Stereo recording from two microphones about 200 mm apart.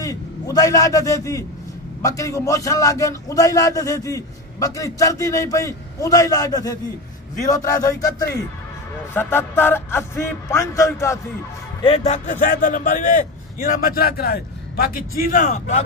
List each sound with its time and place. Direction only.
0.0 s a man's voice: 15° left (ahead or behind)
11.8 s a man's voice: 30° left (ahead or behind)